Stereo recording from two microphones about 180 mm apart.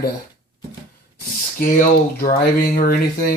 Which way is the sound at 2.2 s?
50° left (ahead or behind).